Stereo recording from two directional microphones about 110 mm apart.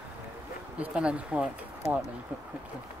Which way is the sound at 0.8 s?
10° right (ahead or behind).